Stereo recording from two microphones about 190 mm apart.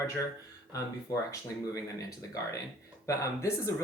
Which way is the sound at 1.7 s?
15° left (ahead or behind).